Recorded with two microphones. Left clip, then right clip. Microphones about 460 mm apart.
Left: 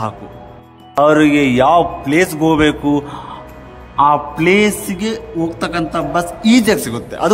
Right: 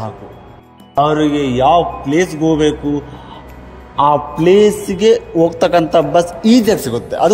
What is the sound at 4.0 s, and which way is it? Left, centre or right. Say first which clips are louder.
A man's voice: even; centre.